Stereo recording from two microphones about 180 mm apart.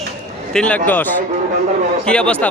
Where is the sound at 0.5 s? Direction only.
5° left (ahead or behind).